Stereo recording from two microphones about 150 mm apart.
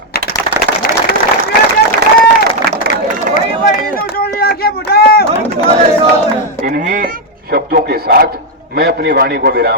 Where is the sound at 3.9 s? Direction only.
85° left.